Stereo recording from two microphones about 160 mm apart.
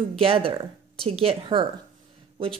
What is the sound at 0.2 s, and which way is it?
A woman's voice, 35° right (ahead or behind).